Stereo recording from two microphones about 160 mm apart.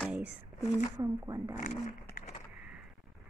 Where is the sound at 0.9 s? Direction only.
20° right (ahead or behind).